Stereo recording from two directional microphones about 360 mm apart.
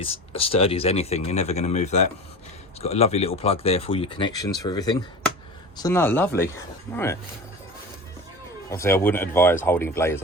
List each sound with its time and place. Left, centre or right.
0.0 s speech: centre
8.7 s speech: centre